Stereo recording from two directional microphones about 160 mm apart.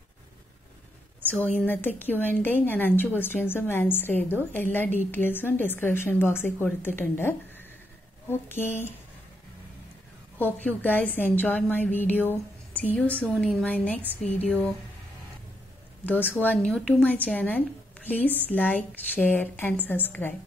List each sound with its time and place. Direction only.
1.2 s a woman's voice: 10° left (ahead or behind)
10.4 s a woman's voice: 10° left (ahead or behind)
16.1 s a woman's voice: 10° left (ahead or behind)